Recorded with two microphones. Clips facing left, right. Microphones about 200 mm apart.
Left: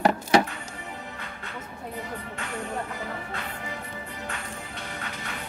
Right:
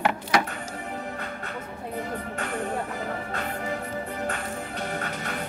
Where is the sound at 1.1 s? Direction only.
50° right (ahead or behind).